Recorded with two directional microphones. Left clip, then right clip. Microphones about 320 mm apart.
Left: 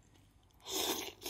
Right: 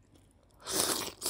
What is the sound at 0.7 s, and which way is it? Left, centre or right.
Crunch, centre.